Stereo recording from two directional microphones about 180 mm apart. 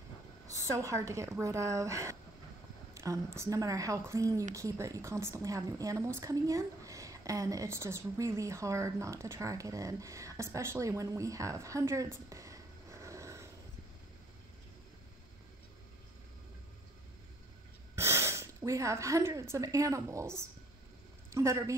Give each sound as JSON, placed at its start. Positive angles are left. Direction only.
{"t": 0.5, "sound": "a woman's voice", "side_deg": -15}
{"t": 17.9, "sound": "a woman's voice", "side_deg": -15}